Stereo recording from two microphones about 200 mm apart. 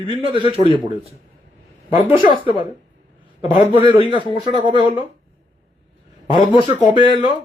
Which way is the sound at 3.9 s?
25° right (ahead or behind).